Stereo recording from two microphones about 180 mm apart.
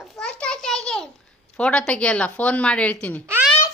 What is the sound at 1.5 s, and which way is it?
A woman's voice, 5° left (ahead or behind).